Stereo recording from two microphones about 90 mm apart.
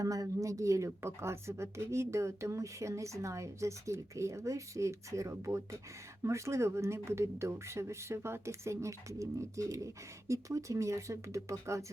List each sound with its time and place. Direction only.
0.0 s speech: 40° right (ahead or behind)